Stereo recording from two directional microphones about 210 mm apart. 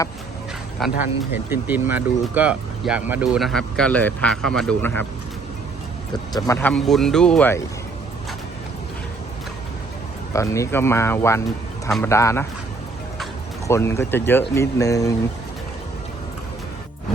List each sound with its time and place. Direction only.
0.8 s speech: centre (ahead or behind)
6.3 s speech: 10° left (ahead or behind)
10.3 s speech: 15° left (ahead or behind)
13.7 s speech: 15° left (ahead or behind)